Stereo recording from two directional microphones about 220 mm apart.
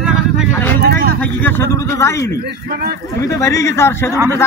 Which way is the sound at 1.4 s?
10° left (ahead or behind).